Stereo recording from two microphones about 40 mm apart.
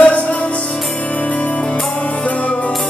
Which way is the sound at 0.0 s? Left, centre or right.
Left.